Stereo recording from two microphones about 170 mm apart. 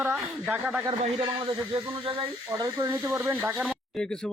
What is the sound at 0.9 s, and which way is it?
Speech, 25° right (ahead or behind).